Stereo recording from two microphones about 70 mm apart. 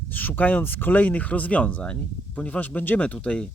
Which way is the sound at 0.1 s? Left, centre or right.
Left.